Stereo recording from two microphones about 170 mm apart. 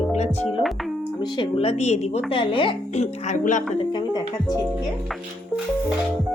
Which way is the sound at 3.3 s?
50° left (ahead or behind).